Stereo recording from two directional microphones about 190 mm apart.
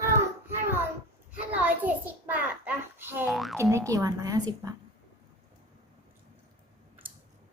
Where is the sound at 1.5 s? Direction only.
10° right (ahead or behind).